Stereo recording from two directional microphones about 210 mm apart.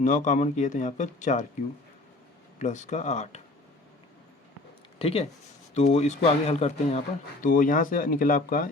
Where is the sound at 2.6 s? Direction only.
35° left (ahead or behind).